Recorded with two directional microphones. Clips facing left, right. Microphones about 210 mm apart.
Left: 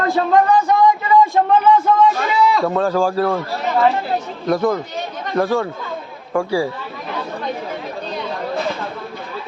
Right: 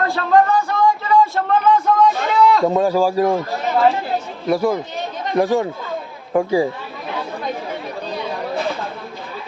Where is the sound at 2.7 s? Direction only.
15° right (ahead or behind).